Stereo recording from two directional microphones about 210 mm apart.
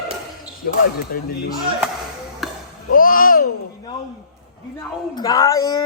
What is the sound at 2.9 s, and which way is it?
Babbling, 40° left (ahead or behind).